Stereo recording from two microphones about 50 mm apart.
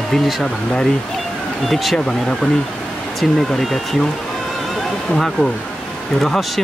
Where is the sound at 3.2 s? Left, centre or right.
Centre.